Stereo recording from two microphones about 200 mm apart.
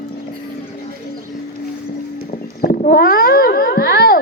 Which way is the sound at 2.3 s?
45° left (ahead or behind).